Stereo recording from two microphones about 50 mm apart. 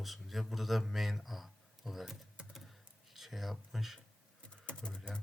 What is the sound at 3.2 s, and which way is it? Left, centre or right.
Speech, centre.